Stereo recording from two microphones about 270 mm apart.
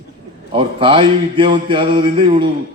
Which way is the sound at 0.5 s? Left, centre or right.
Centre.